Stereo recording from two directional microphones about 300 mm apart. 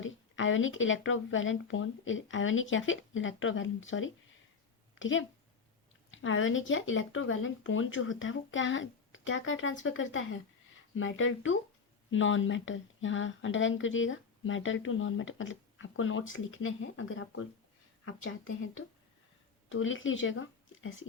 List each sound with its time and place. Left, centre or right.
0.0 s speech: left